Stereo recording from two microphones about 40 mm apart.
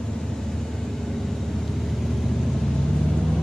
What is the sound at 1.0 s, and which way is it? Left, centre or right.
Vehicle, centre.